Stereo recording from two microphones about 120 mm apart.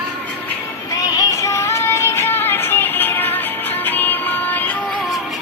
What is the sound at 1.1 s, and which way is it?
Music, 25° left (ahead or behind).